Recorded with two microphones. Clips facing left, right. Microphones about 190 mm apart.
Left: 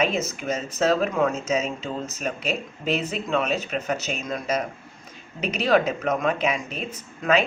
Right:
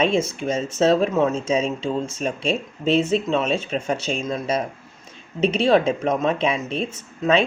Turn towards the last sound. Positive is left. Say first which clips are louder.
# right 3 dB
turn(degrees=-25)  # may be behind; listen again after turning